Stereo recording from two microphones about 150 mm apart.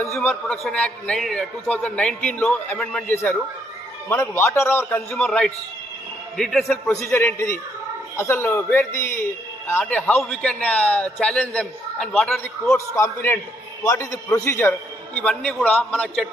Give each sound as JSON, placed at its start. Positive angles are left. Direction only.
{"t": 0.2, "sound": "a man's voice", "side_deg": 5}
{"t": 6.7, "sound": "a man's voice", "side_deg": 15}